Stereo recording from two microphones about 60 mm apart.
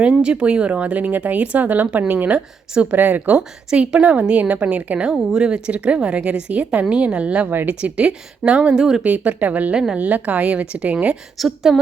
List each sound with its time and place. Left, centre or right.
0.0 s speech: centre
3.7 s a woman's voice: centre
4.0 s speech: right
5.1 s a woman's voice: centre
7.5 s speech: right
7.8 s a woman's voice: centre
9.0 s speech: right
11.3 s a woman's voice: centre